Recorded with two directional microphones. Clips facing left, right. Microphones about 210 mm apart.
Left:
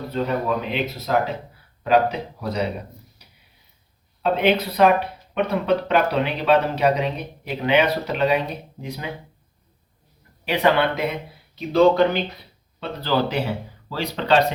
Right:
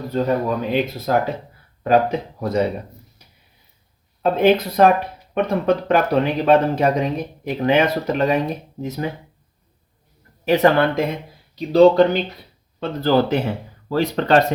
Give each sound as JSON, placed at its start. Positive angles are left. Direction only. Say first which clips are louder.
{"t": 0.1, "sound": "speech", "louder": "right 3 dB", "side_deg": -45}
{"t": 4.2, "sound": "speech", "louder": "right 4 dB", "side_deg": -45}
{"t": 10.4, "sound": "speech", "louder": "right 4 dB", "side_deg": -45}